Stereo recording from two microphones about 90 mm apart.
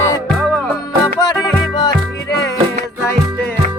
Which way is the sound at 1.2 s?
50° left (ahead or behind).